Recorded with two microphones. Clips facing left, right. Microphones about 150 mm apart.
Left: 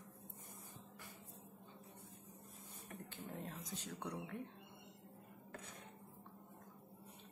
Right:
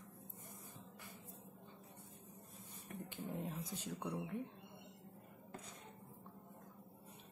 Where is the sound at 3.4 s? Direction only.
5° right (ahead or behind).